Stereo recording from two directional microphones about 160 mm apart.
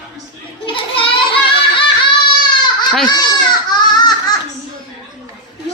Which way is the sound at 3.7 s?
25° left (ahead or behind).